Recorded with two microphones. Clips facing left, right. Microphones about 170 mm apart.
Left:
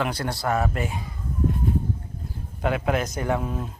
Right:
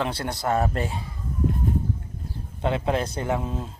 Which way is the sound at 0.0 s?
25° right (ahead or behind).